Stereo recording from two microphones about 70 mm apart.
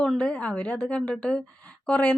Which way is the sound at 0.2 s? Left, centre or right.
Centre.